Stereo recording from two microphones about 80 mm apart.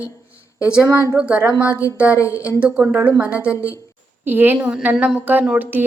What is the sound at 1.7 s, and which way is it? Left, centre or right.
A woman's voice, right.